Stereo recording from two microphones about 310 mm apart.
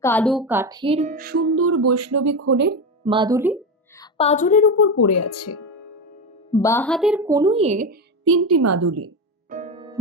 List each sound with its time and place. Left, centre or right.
0.0 s speech: centre; by 2.5 s right
2.5 s speech: right
3.0 s a woman's voice: centre
3.9 s a woman's voice: centre
4.9 s speech: left
6.5 s a woman's voice: centre; by 7.9 s right
8.2 s a woman's voice: right
9.5 s music: right